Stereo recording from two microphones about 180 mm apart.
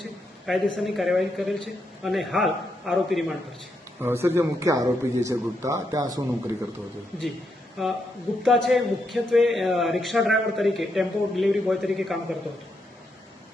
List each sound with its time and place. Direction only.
0.4 s speech: centre (ahead or behind)
4.0 s a man's voice: 15° right (ahead or behind)
7.8 s speech: centre (ahead or behind)